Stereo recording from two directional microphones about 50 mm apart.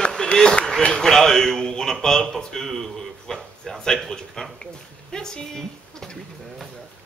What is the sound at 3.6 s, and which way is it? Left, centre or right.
Speech, centre.